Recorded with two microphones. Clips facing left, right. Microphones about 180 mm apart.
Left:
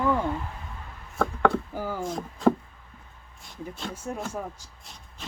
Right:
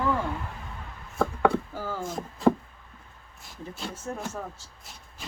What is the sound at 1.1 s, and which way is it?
Chopping, centre (ahead or behind).